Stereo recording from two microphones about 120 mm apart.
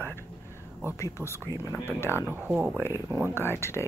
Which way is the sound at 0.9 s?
25° left (ahead or behind).